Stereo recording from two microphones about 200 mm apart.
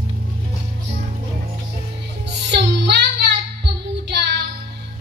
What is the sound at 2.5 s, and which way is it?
Child singing, 55° right (ahead or behind).